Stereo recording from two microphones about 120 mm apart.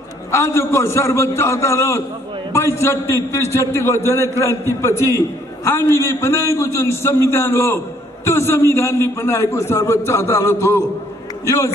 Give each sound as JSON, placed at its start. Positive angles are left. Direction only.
{"t": 0.3, "sound": "a man's voice", "side_deg": 20}